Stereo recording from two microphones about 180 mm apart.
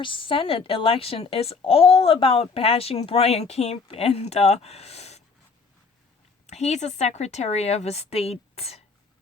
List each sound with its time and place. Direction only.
0.0 s a woman's voice: 30° left (ahead or behind)
6.5 s a woman's voice: 40° left (ahead or behind)